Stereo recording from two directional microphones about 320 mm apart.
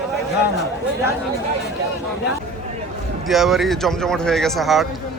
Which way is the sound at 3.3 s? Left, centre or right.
Centre.